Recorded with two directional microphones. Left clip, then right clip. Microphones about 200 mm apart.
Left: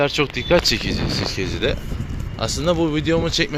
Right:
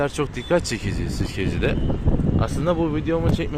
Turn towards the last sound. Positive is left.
turn(degrees=5)  # may be behind; listen again after turning